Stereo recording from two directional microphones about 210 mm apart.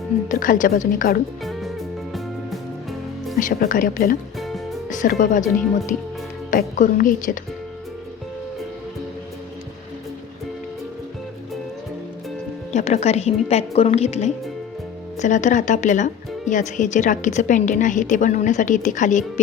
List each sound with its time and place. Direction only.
0.3 s speech: 40° left (ahead or behind)
1.5 s music: centre (ahead or behind)
3.3 s speech: 40° left (ahead or behind)
4.4 s music: centre (ahead or behind)
4.9 s speech: 40° left (ahead or behind)
12.7 s speech: 30° left (ahead or behind)